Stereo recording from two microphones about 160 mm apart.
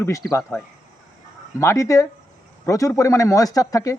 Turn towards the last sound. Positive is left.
turn(degrees=20)  # may be behind; listen again after turning